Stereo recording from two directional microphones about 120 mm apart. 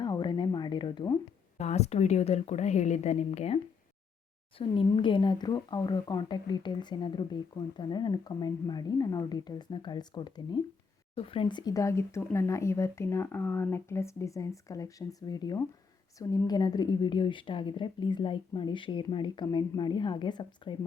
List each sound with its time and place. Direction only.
0.0 s a sound: 40° left (ahead or behind)
1.5 s a woman's voice: 65° left (ahead or behind)
4.5 s speech: 45° left (ahead or behind)